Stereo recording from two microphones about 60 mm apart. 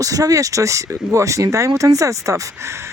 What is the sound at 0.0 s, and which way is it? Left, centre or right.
Speech, right.